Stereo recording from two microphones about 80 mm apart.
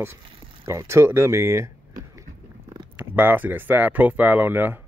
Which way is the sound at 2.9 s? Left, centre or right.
Right.